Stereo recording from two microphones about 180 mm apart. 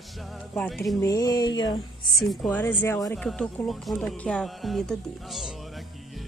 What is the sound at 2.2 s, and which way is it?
Speech, 5° left (ahead or behind).